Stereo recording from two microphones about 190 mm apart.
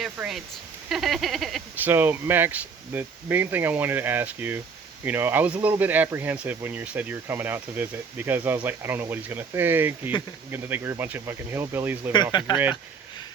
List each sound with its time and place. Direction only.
0.0 s speech: centre (ahead or behind)
1.9 s speech: 10° right (ahead or behind)
12.3 s speech: 25° left (ahead or behind)